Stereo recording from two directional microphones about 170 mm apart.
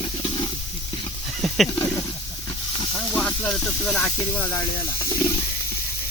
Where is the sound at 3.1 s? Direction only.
5° left (ahead or behind).